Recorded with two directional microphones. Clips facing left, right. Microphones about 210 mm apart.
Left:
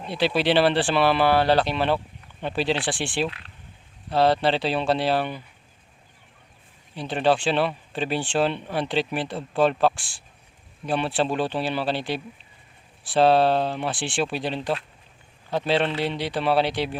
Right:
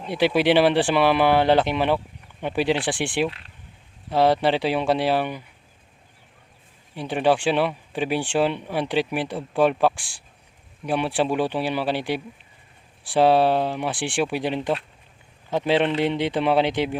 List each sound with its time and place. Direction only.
0.0 s speech: 15° right (ahead or behind)
6.9 s speech: 10° right (ahead or behind)